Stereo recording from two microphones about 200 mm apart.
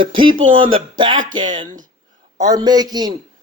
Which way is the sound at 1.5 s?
40° right (ahead or behind).